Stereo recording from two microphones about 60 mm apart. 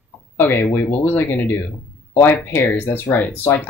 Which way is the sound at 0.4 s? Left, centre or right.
Left.